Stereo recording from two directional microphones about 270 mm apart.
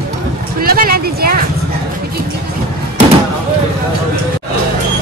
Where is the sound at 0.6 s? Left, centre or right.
Right.